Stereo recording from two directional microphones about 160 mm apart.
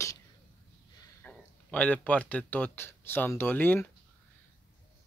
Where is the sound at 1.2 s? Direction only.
10° left (ahead or behind).